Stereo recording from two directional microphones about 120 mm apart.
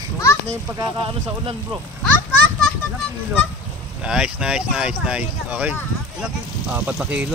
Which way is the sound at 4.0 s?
5° right (ahead or behind).